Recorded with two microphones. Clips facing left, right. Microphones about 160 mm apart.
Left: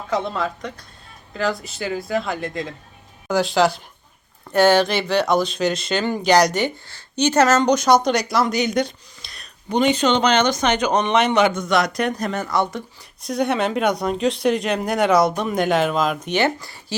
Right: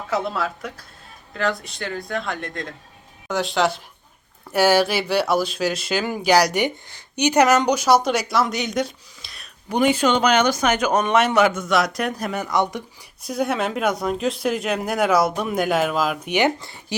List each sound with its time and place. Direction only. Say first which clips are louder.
0.1 s speech: left 1 dB; 5° right (ahead or behind)
16.6 s speech: even; 25° right (ahead or behind)